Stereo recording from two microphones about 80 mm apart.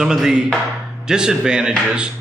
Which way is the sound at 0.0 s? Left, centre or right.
Centre.